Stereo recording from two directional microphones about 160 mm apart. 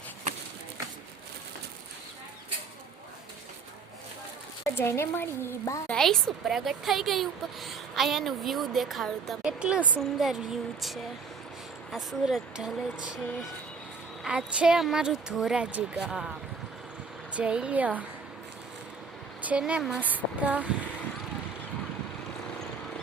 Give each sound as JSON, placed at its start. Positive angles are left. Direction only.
{"t": 4.7, "sound": "a woman's voice", "side_deg": 15}
{"t": 5.9, "sound": "a woman's voice", "side_deg": 5}
{"t": 14.3, "sound": "a woman's voice", "side_deg": -5}
{"t": 17.3, "sound": "speech", "side_deg": -5}
{"t": 19.4, "sound": "a woman's voice", "side_deg": -10}